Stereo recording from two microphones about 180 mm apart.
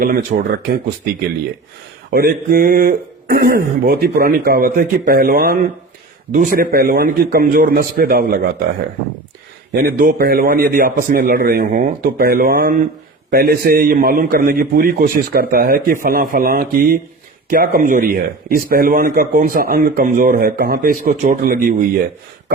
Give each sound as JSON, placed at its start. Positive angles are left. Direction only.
{"t": 0.0, "sound": "a man's voice", "side_deg": -50}
{"t": 2.0, "sound": "speech", "side_deg": -55}
{"t": 9.7, "sound": "a man's voice", "side_deg": -55}